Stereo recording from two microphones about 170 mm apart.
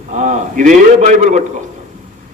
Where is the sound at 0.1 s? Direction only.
45° right (ahead or behind).